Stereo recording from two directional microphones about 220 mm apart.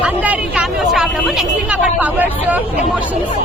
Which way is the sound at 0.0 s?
5° right (ahead or behind).